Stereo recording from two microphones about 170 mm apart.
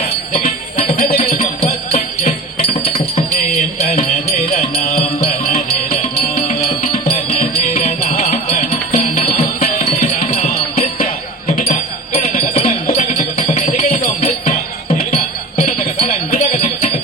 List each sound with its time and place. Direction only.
0.8 s music: 35° left (ahead or behind)
5.2 s music: 35° left (ahead or behind)